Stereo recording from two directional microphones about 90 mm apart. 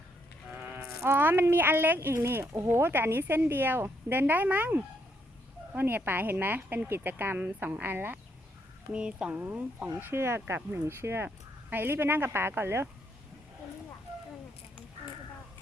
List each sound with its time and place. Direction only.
1.0 s speech: 25° right (ahead or behind)
8.9 s speech: 10° right (ahead or behind)